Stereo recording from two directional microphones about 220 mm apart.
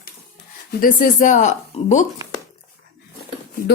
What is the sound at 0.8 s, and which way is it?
Speech, 35° left (ahead or behind).